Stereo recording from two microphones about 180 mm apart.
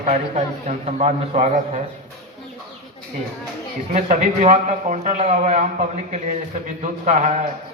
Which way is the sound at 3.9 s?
45° right (ahead or behind).